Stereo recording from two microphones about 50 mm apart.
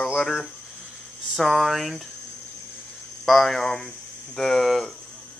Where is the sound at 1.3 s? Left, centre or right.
Centre.